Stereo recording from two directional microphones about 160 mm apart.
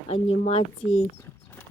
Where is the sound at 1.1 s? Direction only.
10° left (ahead or behind).